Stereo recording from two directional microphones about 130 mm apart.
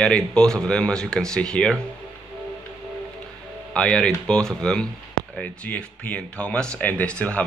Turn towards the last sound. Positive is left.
turn(degrees=10)  # may be behind; listen again after turning